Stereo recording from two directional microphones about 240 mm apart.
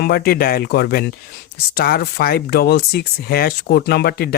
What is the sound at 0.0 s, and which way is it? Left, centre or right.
Speech, left.